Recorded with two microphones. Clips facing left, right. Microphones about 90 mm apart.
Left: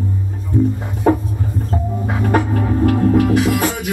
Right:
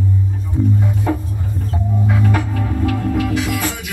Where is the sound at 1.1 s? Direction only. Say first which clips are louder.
Left 8 dB; 40° left (ahead or behind).